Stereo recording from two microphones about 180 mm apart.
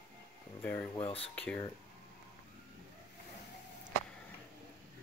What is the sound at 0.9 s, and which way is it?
Speech, 30° left (ahead or behind).